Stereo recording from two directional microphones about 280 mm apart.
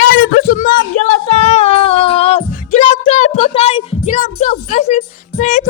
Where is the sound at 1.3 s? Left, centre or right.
Left.